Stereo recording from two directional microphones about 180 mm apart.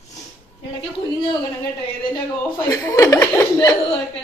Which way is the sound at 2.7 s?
20° left (ahead or behind).